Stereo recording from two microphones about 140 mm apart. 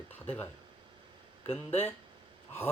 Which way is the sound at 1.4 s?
45° left (ahead or behind).